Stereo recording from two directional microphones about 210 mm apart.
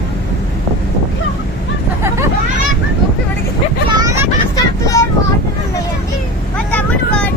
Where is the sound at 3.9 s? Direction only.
15° right (ahead or behind).